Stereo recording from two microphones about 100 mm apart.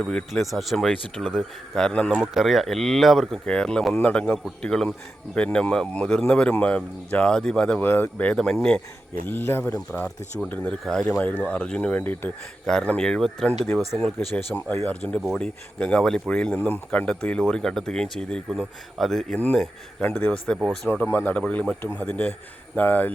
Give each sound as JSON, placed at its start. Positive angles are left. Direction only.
{"t": 0.0, "sound": "speech", "side_deg": 5}
{"t": 2.2, "sound": "speech", "side_deg": -5}
{"t": 7.8, "sound": "speech", "side_deg": 20}
{"t": 9.2, "sound": "speech", "side_deg": 20}
{"t": 9.7, "sound": "speech", "side_deg": 10}
{"t": 14.3, "sound": "speech", "side_deg": 20}
{"t": 15.2, "sound": "speech", "side_deg": 0}
{"t": 20.0, "sound": "speech", "side_deg": 15}
{"t": 21.8, "sound": "speech", "side_deg": 25}